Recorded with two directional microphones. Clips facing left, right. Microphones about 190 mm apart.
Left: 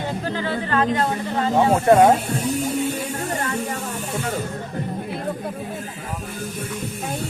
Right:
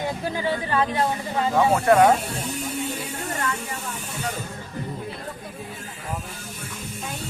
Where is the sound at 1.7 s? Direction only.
25° left (ahead or behind).